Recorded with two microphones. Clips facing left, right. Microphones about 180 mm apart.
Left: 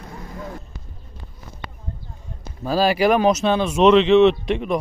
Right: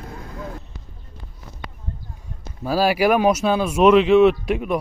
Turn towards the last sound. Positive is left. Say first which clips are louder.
# even
turn(degrees=-5)  # may be behind; listen again after turning